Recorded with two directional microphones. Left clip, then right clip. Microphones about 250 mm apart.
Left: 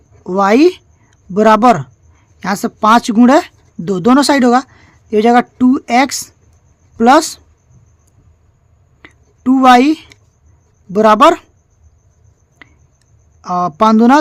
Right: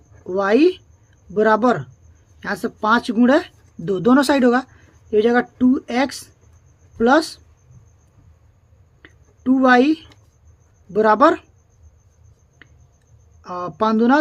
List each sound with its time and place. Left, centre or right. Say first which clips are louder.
0.3 s speech: left 6 dB; left
9.0 s a sound: left 7 dB; left
10.9 s speech: left 6 dB; left
13.4 s speech: left 9 dB; left